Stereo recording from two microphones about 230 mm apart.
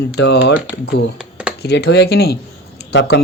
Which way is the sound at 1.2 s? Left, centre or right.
Centre.